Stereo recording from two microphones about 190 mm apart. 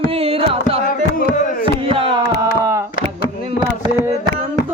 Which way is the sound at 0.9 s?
45° left (ahead or behind).